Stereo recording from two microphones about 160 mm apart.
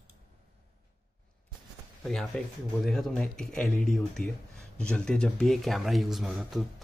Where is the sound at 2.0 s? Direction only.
5° left (ahead or behind).